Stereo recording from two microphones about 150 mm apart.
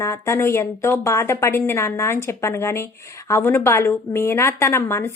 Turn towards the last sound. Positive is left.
turn(degrees=20)  # may be behind; listen again after turning